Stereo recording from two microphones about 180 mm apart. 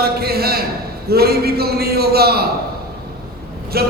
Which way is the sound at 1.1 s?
60° right (ahead or behind).